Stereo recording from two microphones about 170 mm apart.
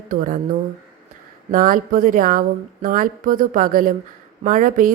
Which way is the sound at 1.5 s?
55° right (ahead or behind).